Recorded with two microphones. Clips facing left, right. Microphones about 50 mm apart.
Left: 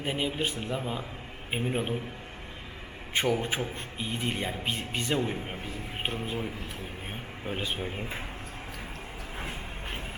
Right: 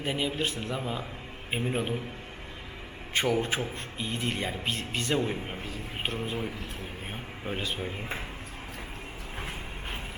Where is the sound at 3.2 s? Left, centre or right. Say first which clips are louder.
Right 1 dB; centre.